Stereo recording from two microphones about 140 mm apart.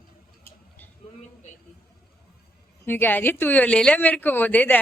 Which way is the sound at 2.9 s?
15° left (ahead or behind).